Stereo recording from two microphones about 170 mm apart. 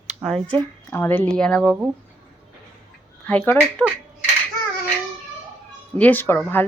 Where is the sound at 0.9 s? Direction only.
10° left (ahead or behind).